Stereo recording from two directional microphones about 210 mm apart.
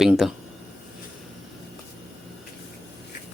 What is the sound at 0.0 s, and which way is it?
Speech, centre (ahead or behind).